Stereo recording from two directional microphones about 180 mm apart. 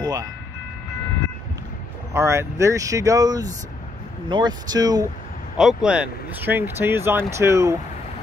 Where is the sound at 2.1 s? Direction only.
15° right (ahead or behind).